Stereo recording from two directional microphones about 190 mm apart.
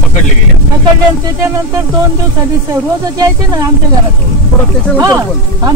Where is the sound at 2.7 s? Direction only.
20° right (ahead or behind).